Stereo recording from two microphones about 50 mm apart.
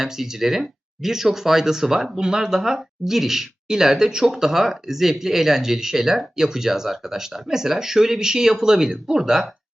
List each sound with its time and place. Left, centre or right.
0.0 s speech: centre